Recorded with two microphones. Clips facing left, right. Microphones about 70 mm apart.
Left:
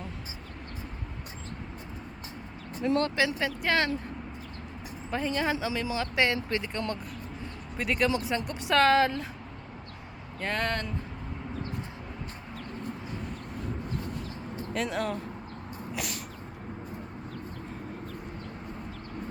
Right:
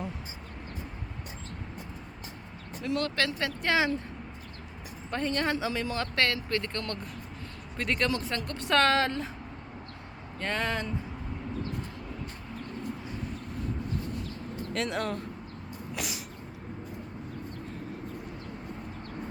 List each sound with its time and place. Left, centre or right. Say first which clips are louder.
2.8 s speech: left 4 dB; left
3.2 s speech: left 2 dB; centre
3.4 s speech: even; centre
5.1 s speech: even; centre
6.2 s speech: left 1 dB; centre
10.4 s speech: even; centre
14.7 s speech: left 1 dB; centre
16.0 s a sound: even; centre